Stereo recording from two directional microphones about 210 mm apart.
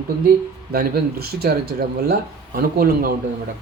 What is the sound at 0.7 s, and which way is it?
Speech, 50° right (ahead or behind).